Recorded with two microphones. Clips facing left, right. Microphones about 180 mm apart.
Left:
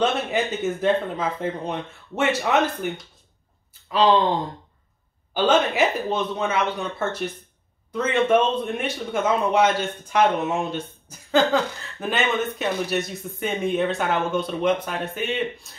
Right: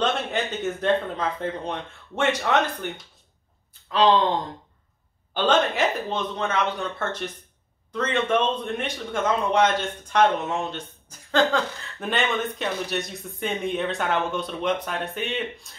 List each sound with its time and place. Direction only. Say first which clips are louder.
0.0 s a man's voice: left 3 dB; 5° left (ahead or behind)
5.3 s a man's voice: left 2 dB; 5° left (ahead or behind)